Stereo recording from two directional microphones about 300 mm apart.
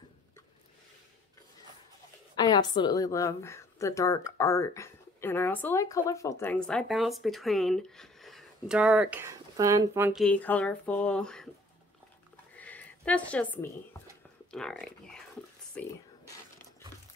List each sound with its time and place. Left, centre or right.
2.3 s a woman's voice: centre
12.5 s a sound: centre
14.5 s speech: centre